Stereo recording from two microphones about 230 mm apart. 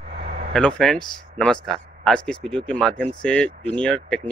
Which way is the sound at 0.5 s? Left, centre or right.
Centre.